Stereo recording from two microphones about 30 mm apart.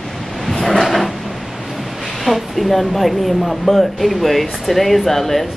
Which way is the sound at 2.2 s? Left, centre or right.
Centre.